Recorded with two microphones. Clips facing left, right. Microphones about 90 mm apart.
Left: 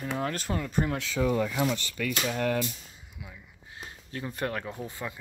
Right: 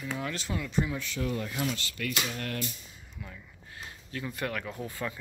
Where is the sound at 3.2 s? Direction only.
10° left (ahead or behind).